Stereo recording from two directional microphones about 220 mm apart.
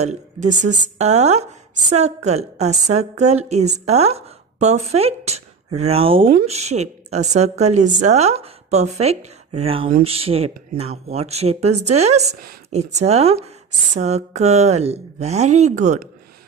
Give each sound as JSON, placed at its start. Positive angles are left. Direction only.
{"t": 0.6, "sound": "a woman's voice", "side_deg": -50}
{"t": 0.9, "sound": "a woman's voice", "side_deg": -30}